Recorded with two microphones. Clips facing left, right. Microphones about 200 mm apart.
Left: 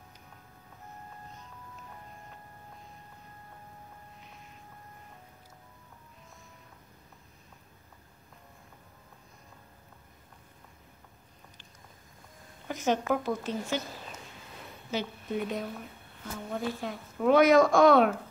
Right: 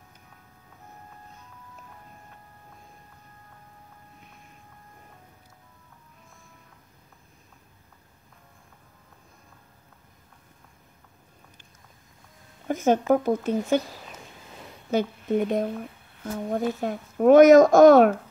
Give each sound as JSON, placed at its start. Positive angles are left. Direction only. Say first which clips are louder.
{"t": 12.6, "sound": "speech", "louder": "right 7 dB", "side_deg": -50}
{"t": 14.9, "sound": "a woman's voice", "louder": "right 9 dB", "side_deg": -50}